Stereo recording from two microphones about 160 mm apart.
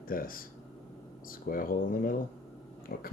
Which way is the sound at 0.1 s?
65° left (ahead or behind).